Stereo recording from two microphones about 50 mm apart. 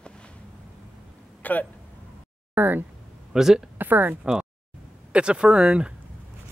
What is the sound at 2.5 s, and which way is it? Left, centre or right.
Speech, right.